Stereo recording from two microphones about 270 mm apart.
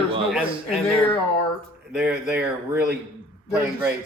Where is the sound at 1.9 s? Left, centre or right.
Centre.